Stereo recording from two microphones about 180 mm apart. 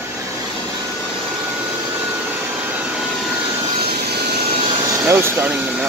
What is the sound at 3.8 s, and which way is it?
Vehicle, 60° right (ahead or behind).